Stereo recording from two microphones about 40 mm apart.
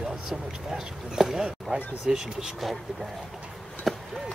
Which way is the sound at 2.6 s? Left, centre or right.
Centre.